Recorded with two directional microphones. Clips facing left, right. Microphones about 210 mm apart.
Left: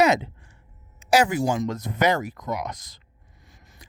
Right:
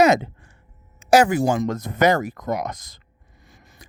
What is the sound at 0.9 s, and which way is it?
Speech, 50° right (ahead or behind).